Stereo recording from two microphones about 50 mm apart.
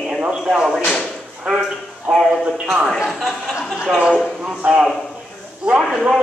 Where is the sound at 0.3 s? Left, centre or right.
Centre.